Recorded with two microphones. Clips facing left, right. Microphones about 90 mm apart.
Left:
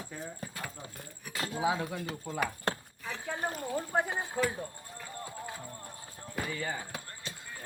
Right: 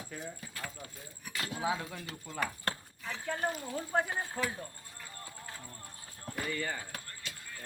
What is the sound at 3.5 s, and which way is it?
Speech, 45° left (ahead or behind).